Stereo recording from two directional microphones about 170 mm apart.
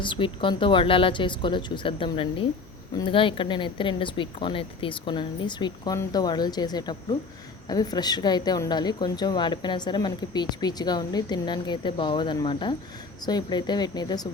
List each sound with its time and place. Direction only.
0.0 s speech: 30° left (ahead or behind)